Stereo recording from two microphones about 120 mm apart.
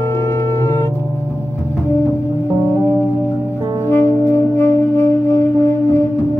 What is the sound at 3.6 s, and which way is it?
Music, 30° right (ahead or behind).